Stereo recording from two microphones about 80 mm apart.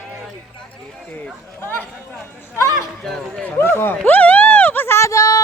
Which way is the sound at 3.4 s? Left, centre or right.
Left.